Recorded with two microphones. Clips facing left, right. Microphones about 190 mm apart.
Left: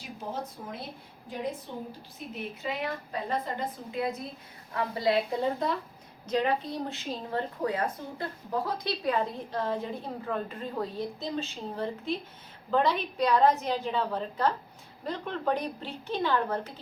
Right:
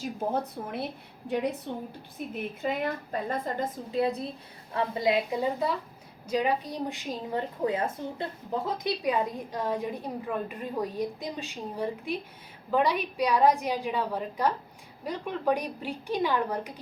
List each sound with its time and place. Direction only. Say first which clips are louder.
0.0 s a woman's voice: right 7 dB; 55° right (ahead or behind)
2.1 s a woman's voice: right 4 dB; 50° right (ahead or behind); by 4.3 s 35° right (ahead or behind)
4.7 s a woman's voice: right 1 dB; 20° right (ahead or behind)